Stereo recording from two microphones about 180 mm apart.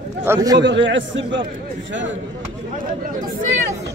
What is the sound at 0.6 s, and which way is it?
Speech, 80° right.